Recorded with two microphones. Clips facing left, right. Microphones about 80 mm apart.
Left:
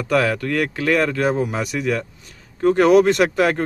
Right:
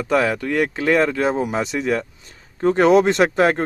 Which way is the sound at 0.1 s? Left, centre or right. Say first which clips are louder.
Even; right.